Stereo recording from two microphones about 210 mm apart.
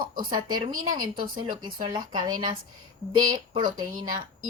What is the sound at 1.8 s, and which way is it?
Speech, 20° right (ahead or behind).